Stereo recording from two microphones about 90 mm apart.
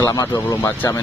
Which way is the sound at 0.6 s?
30° left (ahead or behind).